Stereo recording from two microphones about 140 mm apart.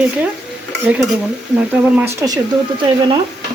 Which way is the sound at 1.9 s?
20° right (ahead or behind).